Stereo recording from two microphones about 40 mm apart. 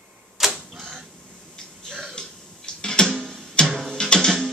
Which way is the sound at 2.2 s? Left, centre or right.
Left.